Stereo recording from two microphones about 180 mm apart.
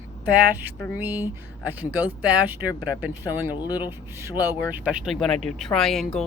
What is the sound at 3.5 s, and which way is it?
Speech, 20° left (ahead or behind).